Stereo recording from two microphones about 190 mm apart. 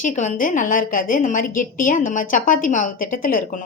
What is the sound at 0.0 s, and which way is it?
A woman's voice, 40° left (ahead or behind).